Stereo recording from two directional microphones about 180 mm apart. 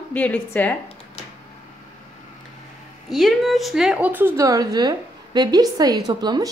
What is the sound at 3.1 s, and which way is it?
A woman's voice, centre (ahead or behind).